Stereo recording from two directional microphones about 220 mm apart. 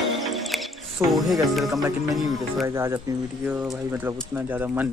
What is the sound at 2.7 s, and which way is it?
Speech, 10° right (ahead or behind).